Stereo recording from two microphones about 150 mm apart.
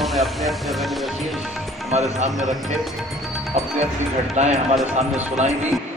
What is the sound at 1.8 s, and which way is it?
Speech, 45° right (ahead or behind).